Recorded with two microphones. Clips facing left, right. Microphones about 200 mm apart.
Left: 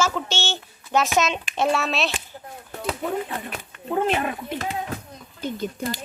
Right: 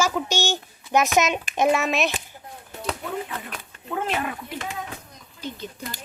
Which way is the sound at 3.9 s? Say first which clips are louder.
Left 4 dB; 25° left (ahead or behind).